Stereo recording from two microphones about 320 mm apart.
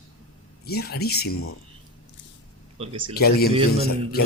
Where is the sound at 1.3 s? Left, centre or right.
Left.